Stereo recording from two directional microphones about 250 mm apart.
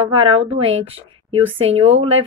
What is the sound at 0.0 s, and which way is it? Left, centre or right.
Speech, right.